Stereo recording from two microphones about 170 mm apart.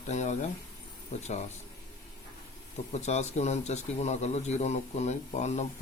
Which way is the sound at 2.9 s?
40° left (ahead or behind).